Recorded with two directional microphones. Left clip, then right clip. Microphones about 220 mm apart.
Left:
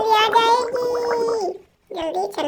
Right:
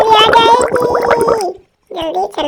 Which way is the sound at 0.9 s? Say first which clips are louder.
Right 10 dB; 40° right (ahead or behind).